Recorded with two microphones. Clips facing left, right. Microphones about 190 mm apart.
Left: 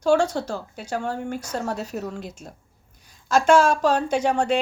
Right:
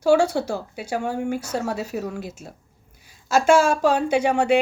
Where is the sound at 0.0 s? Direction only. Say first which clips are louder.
Right 2 dB; 10° right (ahead or behind).